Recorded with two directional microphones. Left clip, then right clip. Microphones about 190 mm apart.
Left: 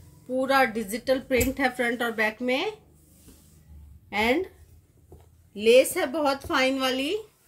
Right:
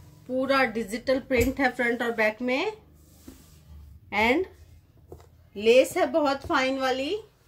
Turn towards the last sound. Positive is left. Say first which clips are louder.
# even
turn(degrees=35)  # may be behind; listen again after turning